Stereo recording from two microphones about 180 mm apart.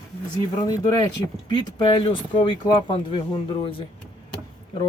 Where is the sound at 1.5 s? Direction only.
25° left (ahead or behind).